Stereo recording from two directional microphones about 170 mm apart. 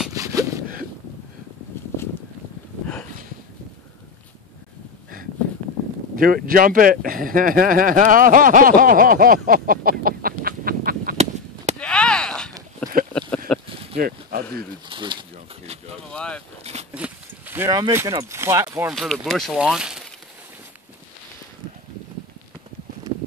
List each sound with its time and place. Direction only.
0.1 s a sound: 20° right (ahead or behind)
6.1 s speech: 55° right (ahead or behind)
11.8 s chop: 5° left (ahead or behind)
12.8 s a sound: 10° left (ahead or behind)
13.9 s a sound: 65° right (ahead or behind)
14.9 s speech: 25° right (ahead or behind)
16.1 s speech: 5° left (ahead or behind)
16.9 s speech: 10° right (ahead or behind)
18.9 s speech: centre (ahead or behind)